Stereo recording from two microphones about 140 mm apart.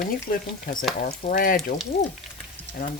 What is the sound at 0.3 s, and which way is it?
Speech, 90° left.